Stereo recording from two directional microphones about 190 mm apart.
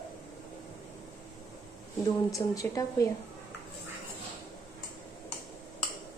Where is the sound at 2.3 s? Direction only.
15° left (ahead or behind).